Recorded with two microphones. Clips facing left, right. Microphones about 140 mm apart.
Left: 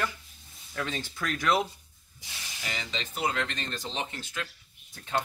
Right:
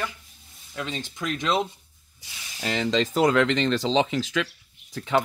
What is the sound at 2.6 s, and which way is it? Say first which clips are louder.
Speech: right 13 dB; 70° right (ahead or behind).